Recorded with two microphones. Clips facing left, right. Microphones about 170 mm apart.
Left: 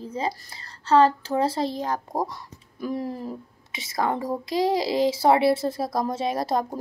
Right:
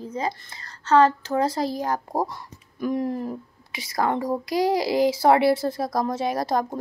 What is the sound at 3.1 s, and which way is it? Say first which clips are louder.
Speech: right 4 dB; centre (ahead or behind).